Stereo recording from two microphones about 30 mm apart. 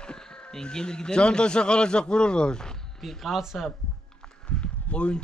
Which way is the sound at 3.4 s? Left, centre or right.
Centre.